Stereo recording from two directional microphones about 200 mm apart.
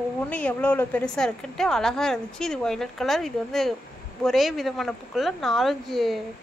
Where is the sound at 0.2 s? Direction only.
5° left (ahead or behind).